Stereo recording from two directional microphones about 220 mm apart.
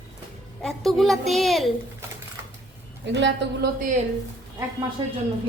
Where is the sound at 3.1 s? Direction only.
55° right (ahead or behind).